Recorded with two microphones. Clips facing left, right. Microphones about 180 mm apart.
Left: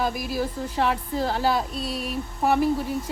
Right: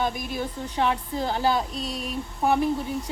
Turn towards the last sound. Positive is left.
turn(degrees=0)  # may be behind; listen again after turning